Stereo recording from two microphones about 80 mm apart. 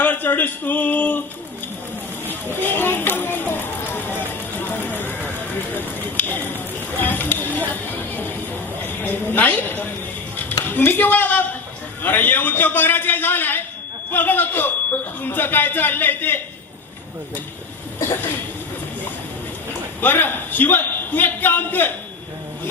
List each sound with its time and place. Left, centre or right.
0.0 s speech: left
2.2 s a sound: left
7.0 s music: left
8.8 s a sound: left
12.0 s a man's voice: left
20.0 s a man's voice: left